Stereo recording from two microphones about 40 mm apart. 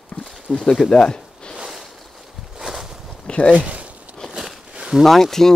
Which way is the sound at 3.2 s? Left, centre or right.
Left.